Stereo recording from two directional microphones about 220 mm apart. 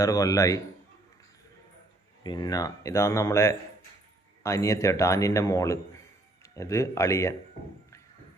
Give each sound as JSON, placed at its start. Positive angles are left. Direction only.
{"t": 0.0, "sound": "a man's voice", "side_deg": 15}
{"t": 2.2, "sound": "a man's voice", "side_deg": 20}